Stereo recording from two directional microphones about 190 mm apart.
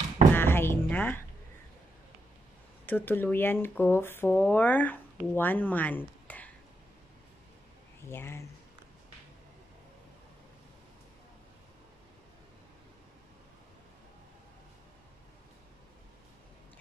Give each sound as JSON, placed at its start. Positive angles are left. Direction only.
{"t": 0.3, "sound": "music", "side_deg": 10}
{"t": 2.9, "sound": "speech", "side_deg": 10}
{"t": 8.1, "sound": "speech", "side_deg": 15}